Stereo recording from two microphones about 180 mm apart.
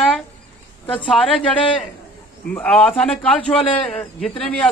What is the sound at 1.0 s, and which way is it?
Speech, centre (ahead or behind).